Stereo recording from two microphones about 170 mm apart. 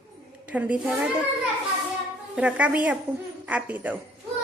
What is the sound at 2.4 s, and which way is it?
A woman's voice, 5° right (ahead or behind).